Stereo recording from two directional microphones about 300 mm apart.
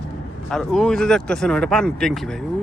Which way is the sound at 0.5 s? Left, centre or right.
Centre.